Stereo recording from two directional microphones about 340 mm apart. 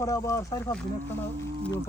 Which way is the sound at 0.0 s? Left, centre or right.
Centre.